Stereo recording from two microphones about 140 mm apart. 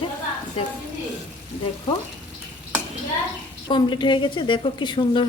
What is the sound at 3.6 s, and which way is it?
A woman's voice, 35° left (ahead or behind).